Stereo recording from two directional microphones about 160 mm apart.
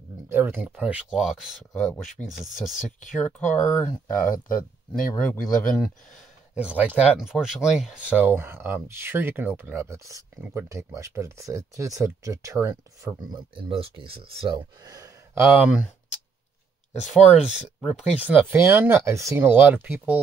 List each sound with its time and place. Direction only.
0.3 s speech: 10° right (ahead or behind); by 3.9 s 10° left (ahead or behind)
4.2 s speech: 60° left (ahead or behind)
5.1 s speech: 10° left (ahead or behind)
6.5 s speech: 5° right (ahead or behind)
10.4 s speech: 10° right (ahead or behind)
13.3 s speech: 35° right (ahead or behind)
15.4 s speech: 5° right (ahead or behind)
17.1 s speech: 5° right (ahead or behind)